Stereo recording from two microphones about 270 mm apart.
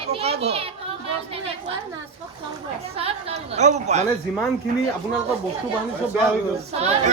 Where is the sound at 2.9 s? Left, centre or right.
Right.